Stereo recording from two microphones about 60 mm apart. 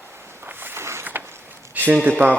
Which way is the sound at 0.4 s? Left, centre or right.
Right.